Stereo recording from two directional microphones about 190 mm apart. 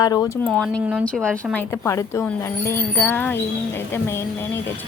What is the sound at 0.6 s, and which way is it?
Speech, 5° left (ahead or behind).